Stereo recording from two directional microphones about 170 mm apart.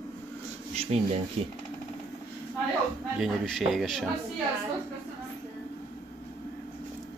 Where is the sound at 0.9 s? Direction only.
40° right (ahead or behind).